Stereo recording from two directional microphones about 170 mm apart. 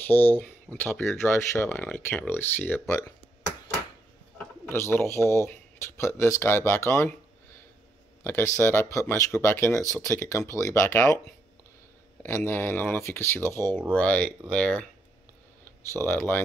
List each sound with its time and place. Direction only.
0.0 s speech: 10° left (ahead or behind)
4.7 s speech: 15° left (ahead or behind)
8.2 s speech: 15° left (ahead or behind)
12.2 s speech: 15° left (ahead or behind)